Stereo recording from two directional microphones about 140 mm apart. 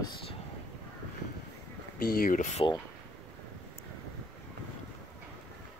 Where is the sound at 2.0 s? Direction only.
90° left; by 2.7 s 60° left (ahead or behind).